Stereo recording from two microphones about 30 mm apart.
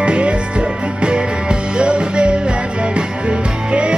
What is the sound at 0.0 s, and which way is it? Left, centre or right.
Music, right.